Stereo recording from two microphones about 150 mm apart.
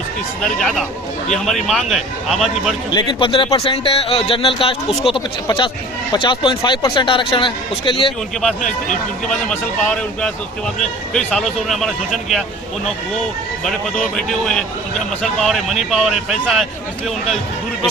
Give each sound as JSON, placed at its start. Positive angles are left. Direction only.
{"t": 0.4, "sound": "a man's voice", "side_deg": 0}
{"t": 2.9, "sound": "speech", "side_deg": 30}
{"t": 8.4, "sound": "a man's voice", "side_deg": 5}
{"t": 13.7, "sound": "a man's voice", "side_deg": 5}